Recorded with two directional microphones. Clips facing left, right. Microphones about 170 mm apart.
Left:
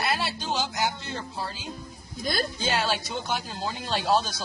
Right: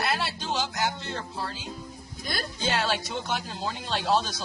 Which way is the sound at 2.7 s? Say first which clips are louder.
Right 2 dB; 5° left (ahead or behind).